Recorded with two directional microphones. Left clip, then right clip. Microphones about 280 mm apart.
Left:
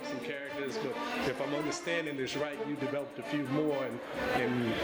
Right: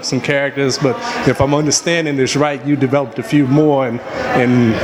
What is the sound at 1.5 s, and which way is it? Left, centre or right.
A man's voice, right.